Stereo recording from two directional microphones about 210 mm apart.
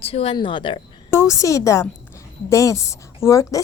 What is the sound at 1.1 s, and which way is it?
A woman's voice, 15° left (ahead or behind).